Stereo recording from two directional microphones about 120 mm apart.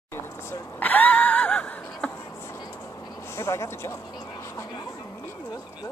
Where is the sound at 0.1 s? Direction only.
15° left (ahead or behind).